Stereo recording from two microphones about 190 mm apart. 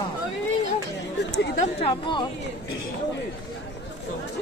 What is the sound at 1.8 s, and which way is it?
Speech, 25° left (ahead or behind).